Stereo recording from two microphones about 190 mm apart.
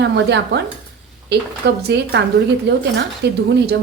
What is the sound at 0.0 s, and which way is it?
Speech, 65° right (ahead or behind).